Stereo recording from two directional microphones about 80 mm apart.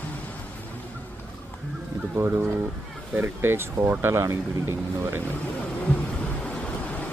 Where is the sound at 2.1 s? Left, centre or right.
Right.